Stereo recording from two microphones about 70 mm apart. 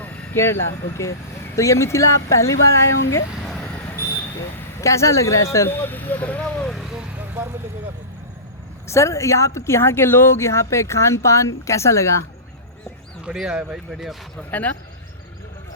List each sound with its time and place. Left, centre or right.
0.3 s speech: left
3.6 s a sound: left
4.8 s speech: left
8.9 s speech: left
13.3 s speech: centre
14.5 s a man's voice: left